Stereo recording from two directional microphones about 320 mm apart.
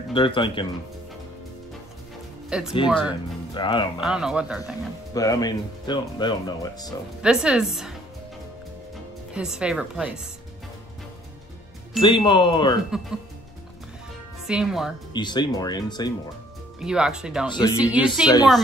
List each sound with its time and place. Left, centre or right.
0.1 s speech: centre
2.5 s speech: centre
3.1 s speech: centre
4.0 s speech: centre
5.1 s speech: centre
7.2 s speech: centre
9.3 s speech: centre
12.0 s speech: centre
14.4 s speech: centre
15.1 s speech: centre
16.8 s speech: centre
17.5 s speech: centre
17.7 s speech: centre
18.2 s speech: centre